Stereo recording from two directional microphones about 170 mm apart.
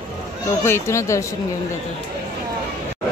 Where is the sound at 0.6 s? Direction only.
15° left (ahead or behind).